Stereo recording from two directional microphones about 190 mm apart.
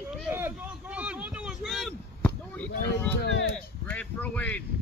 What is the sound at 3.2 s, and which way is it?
Speech, 65° left (ahead or behind).